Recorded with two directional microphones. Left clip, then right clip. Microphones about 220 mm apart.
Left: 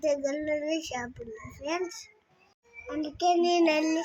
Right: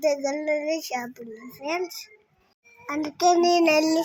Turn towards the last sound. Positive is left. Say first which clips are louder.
# right 6 dB
turn(degrees=-20)  # may be behind; listen again after turning